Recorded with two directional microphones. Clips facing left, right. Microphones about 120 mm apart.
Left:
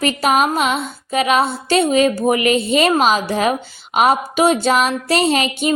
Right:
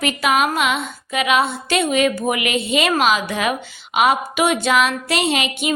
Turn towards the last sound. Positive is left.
turn(degrees=40)  # may be behind; listen again after turning